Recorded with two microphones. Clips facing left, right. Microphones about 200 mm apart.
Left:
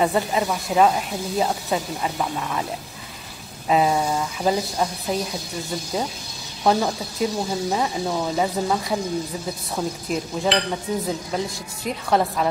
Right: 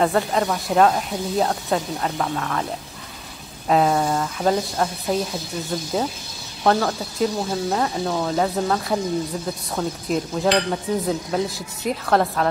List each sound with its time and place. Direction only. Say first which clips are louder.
0.0 s speech: right 1 dB; 5° left (ahead or behind)
3.6 s speech: right 1 dB; 5° left (ahead or behind)
6.9 s speech: right 2 dB; centre (ahead or behind)